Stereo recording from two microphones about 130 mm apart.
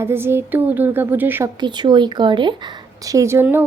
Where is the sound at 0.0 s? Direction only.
20° right (ahead or behind).